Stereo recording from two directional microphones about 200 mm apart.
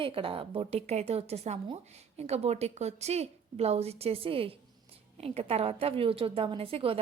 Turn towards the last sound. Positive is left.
turn(degrees=-25)  # may be behind; listen again after turning